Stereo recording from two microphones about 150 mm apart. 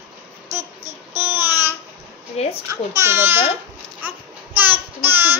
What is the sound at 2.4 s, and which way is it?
Speech, 45° left (ahead or behind).